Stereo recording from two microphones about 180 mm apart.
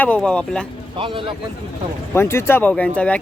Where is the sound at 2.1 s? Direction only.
15° left (ahead or behind).